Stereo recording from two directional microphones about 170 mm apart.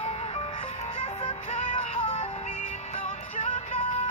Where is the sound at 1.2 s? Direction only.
35° left (ahead or behind).